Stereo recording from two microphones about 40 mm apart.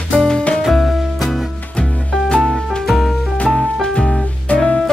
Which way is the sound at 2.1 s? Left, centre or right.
Centre.